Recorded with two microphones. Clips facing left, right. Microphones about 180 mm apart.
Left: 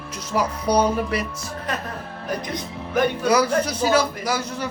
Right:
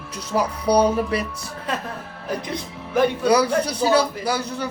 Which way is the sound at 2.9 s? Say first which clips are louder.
Right 2 dB; 30° right (ahead or behind).